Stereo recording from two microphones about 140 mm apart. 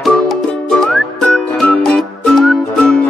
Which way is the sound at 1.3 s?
5° left (ahead or behind).